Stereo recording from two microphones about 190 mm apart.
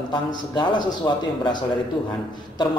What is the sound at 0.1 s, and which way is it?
A man's voice, 25° left (ahead or behind).